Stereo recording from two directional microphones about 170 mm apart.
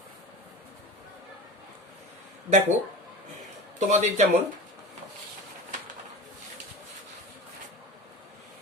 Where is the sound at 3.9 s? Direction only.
45° right (ahead or behind).